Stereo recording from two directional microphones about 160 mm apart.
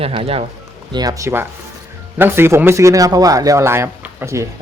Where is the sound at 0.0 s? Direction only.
35° right (ahead or behind).